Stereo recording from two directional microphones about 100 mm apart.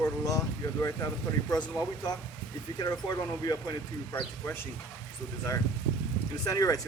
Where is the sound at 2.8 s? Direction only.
40° left (ahead or behind).